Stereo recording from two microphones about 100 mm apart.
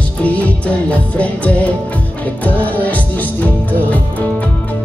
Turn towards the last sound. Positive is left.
turn(degrees=15)  # may be behind; listen again after turning